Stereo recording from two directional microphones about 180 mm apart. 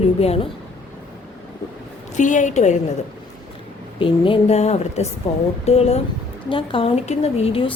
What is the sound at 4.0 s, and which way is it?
A woman's voice, 30° left (ahead or behind).